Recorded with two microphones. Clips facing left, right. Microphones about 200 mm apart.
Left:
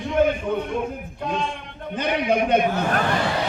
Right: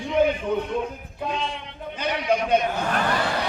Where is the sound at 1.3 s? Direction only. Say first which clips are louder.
Left 3 dB; 50° left (ahead or behind).